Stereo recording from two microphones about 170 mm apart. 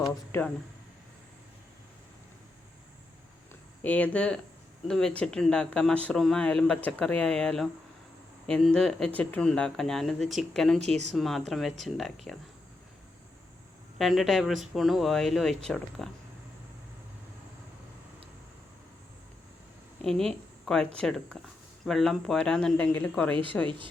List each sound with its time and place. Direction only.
0.3 s speech: 10° left (ahead or behind)
3.8 s speech: 10° left (ahead or behind)
10.8 s speech: 40° right (ahead or behind)
11.1 s speech: centre (ahead or behind)
14.0 s speech: centre (ahead or behind)
20.0 s a woman's voice: 5° left (ahead or behind)
23.6 s speech: 30° right (ahead or behind)